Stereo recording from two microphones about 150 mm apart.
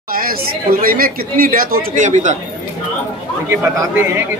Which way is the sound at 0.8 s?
75° right (ahead or behind).